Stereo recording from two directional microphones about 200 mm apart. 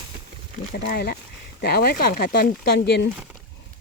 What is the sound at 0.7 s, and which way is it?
Speech, 50° left (ahead or behind).